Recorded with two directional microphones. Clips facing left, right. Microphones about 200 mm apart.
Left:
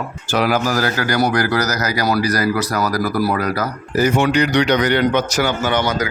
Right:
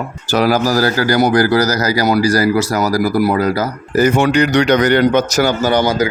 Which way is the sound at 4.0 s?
50° right (ahead or behind).